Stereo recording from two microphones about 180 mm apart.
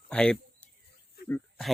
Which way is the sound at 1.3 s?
Centre (ahead or behind).